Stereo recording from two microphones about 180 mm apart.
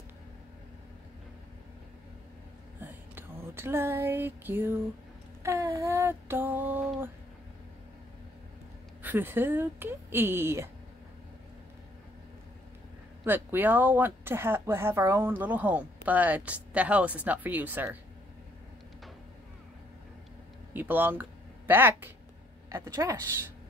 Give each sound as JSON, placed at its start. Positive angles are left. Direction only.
{"t": 2.8, "sound": "a sound", "side_deg": -10}
{"t": 5.4, "sound": "mantra", "side_deg": -15}
{"t": 9.0, "sound": "speech", "side_deg": -10}
{"t": 13.2, "sound": "speech", "side_deg": -10}
{"t": 20.7, "sound": "speech", "side_deg": -10}